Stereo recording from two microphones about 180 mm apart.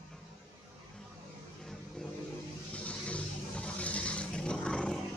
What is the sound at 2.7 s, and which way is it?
Vehicle, 5° left (ahead or behind).